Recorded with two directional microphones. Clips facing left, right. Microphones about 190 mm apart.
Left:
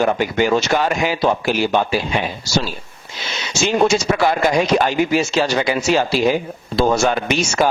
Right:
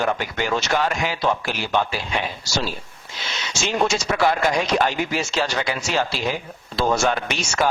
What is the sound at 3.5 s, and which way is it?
A man's voice, 5° left (ahead or behind).